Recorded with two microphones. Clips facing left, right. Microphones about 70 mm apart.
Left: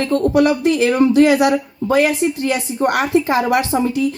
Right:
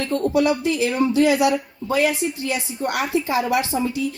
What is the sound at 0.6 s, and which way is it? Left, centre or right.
A woman's voice, left.